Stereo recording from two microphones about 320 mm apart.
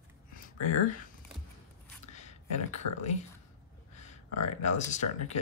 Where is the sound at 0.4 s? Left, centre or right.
Left.